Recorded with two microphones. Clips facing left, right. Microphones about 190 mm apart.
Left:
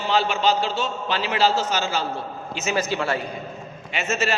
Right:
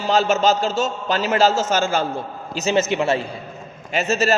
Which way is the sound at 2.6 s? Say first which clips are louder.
Right 5 dB; 30° right (ahead or behind).